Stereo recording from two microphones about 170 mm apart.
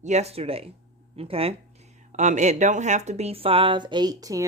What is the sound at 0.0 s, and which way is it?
Speech, 40° right (ahead or behind).